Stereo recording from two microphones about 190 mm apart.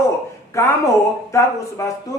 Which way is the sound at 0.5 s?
15° left (ahead or behind).